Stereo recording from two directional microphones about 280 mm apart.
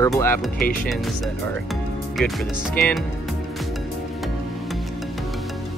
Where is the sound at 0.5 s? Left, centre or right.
Left.